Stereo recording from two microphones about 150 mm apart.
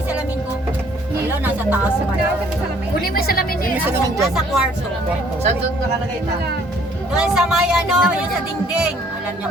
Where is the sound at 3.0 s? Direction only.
80° left.